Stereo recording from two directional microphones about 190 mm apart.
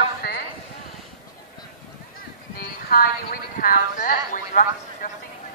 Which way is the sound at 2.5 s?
50° left (ahead or behind).